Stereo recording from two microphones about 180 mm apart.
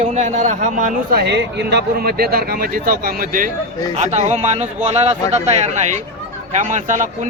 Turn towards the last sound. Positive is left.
turn(degrees=-45)  # may be behind; listen again after turning